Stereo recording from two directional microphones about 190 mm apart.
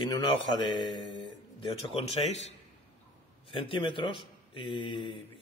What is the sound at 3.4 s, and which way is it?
A man's voice, 30° left (ahead or behind).